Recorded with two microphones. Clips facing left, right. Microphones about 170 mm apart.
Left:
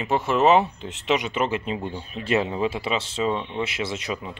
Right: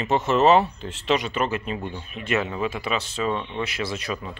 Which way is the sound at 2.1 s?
30° left (ahead or behind).